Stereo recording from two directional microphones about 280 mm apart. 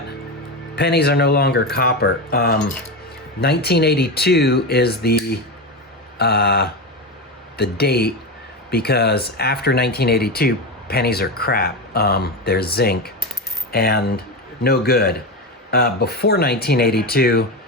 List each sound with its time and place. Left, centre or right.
0.8 s speech: left